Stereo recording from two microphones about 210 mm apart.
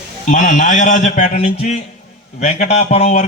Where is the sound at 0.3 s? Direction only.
35° left (ahead or behind).